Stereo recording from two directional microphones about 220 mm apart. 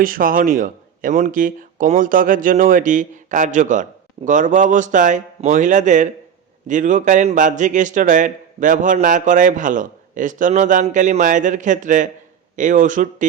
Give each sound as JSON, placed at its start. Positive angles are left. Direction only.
{"t": 0.0, "sound": "speech", "side_deg": -40}